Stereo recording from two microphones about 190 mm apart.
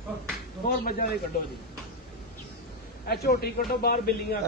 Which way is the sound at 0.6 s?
55° left (ahead or behind).